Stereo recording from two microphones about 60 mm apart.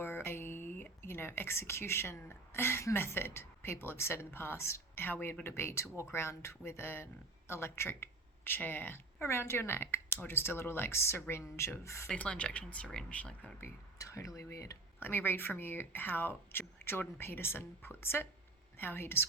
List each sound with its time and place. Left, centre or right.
0.0 s a sound: left
1.0 s a woman's voice: left
5.0 s a woman's voice: left
12.1 s speech: left
14.0 s speech: left
14.9 s speech: left